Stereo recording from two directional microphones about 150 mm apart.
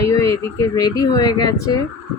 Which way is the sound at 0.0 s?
20° left (ahead or behind).